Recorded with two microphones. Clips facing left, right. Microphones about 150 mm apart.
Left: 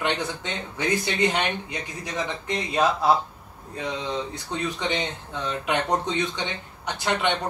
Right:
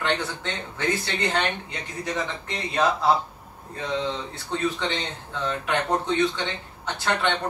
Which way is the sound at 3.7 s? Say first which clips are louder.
Right 1 dB; 15° left (ahead or behind).